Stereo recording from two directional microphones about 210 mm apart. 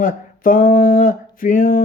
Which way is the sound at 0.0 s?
40° left (ahead or behind).